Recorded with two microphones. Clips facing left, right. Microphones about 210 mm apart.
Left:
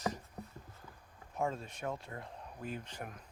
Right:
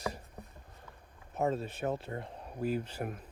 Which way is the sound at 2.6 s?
5° right (ahead or behind).